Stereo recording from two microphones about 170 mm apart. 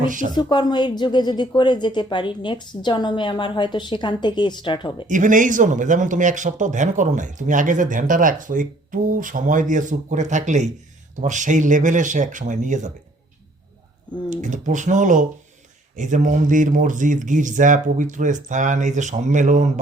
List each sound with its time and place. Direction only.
0.0 s speech: 50° right (ahead or behind)
0.5 s a woman's voice: 25° left (ahead or behind)
5.0 s speech: 50° right (ahead or behind)
14.3 s speech: 45° right (ahead or behind)